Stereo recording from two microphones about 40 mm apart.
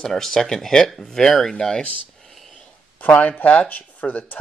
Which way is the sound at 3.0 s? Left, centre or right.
Left.